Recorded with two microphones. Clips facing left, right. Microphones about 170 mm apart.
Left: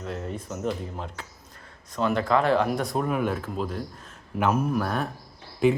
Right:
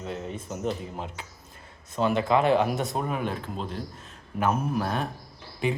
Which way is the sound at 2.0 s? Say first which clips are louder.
Even; 25° right (ahead or behind).